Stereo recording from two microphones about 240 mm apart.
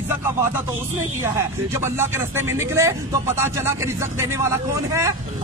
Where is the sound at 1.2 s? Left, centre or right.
Centre.